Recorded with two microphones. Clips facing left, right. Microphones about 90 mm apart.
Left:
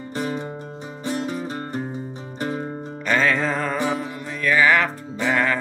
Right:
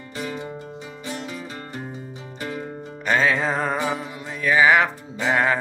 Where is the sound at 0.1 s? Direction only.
40° left (ahead or behind).